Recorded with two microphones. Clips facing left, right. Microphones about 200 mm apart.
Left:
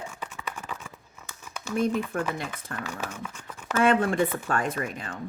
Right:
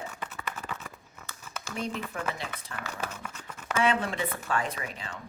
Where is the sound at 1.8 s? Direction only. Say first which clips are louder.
Left 9 dB; 50° left (ahead or behind).